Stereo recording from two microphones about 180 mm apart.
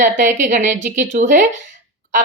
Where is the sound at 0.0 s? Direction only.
45° right (ahead or behind).